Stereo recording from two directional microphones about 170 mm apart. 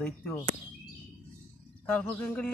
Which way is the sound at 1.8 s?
10° left (ahead or behind).